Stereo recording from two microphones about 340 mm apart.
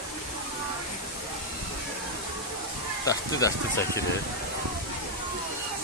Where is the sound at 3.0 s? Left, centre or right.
Centre.